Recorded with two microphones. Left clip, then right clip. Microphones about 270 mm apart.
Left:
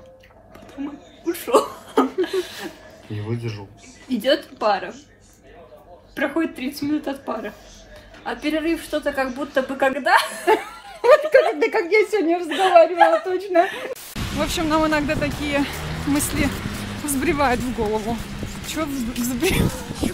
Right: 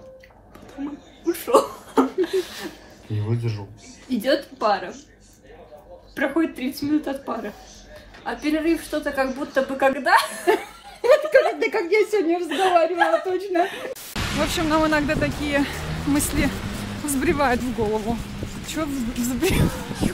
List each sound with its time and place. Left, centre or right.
1.2 s chuckle: centre
3.2 s speech: centre
4.1 s speech: centre
6.1 s speech: centre
10.4 s speech: left
12.4 s speech: centre
13.3 s a woman's voice: left
13.7 s speech: centre